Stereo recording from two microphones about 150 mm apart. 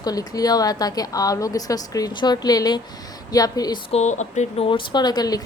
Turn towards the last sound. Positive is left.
turn(degrees=25)  # may be behind; listen again after turning